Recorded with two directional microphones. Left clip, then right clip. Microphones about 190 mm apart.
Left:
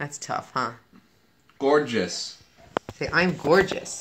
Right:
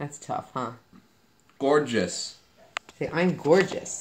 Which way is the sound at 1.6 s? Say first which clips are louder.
Left 1 dB; 45° right (ahead or behind).